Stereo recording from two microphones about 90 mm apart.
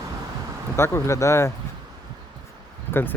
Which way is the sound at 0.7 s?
30° left (ahead or behind).